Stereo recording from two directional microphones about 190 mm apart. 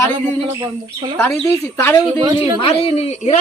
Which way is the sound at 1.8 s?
10° left (ahead or behind).